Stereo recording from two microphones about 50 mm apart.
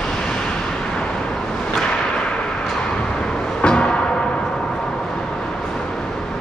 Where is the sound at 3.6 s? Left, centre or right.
Centre.